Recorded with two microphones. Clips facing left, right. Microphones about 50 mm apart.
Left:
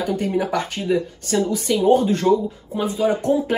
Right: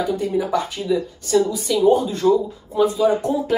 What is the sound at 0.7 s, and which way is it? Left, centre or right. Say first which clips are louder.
Speech: even; left.